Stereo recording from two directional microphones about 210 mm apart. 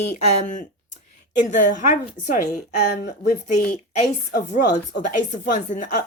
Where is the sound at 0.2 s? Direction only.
35° left (ahead or behind).